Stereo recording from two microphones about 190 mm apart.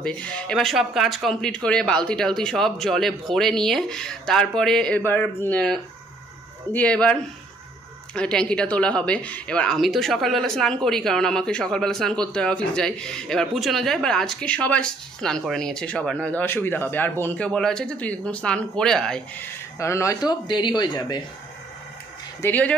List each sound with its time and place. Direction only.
0.0 s speech: 5° left (ahead or behind)
19.8 s speech: 15° left (ahead or behind)
22.4 s speech: 10° left (ahead or behind)